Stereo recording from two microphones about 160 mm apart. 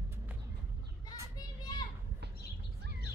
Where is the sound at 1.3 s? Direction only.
25° left (ahead or behind).